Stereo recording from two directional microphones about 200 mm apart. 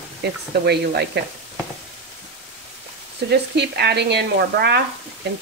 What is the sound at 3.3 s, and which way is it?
Speech, 55° right (ahead or behind).